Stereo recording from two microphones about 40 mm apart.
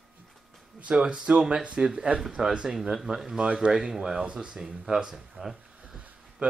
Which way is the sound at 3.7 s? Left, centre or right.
Centre.